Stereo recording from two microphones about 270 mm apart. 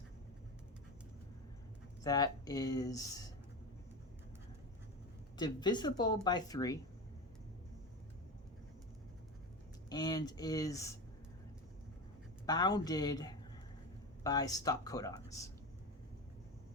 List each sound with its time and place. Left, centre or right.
2.0 s speech: centre
5.4 s speech: centre
9.9 s speech: centre
12.5 s speech: centre